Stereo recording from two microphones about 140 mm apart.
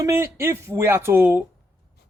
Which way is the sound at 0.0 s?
20° right (ahead or behind).